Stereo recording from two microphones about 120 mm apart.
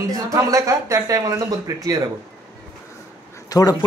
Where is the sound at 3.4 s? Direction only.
30° left (ahead or behind).